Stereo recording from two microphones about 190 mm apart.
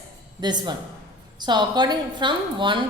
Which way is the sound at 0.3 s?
20° right (ahead or behind).